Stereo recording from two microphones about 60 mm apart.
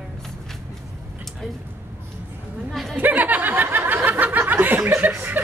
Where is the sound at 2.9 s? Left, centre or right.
Right.